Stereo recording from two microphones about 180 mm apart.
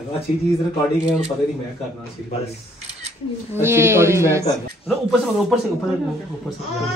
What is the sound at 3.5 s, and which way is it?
A woman's voice, 15° right (ahead or behind).